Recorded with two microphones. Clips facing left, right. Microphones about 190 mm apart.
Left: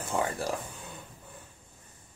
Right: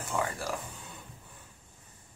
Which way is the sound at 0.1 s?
25° left (ahead or behind).